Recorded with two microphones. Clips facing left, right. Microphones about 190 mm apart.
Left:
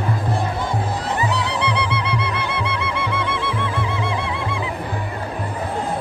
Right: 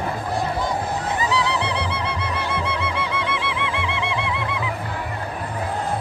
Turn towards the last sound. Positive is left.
turn(degrees=35)  # may be behind; listen again after turning